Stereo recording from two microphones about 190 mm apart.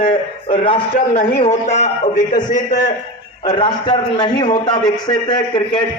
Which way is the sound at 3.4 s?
25° left (ahead or behind).